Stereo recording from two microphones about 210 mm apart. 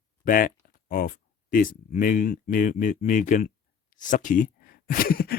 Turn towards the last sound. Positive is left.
turn(degrees=45)  # may be behind; listen again after turning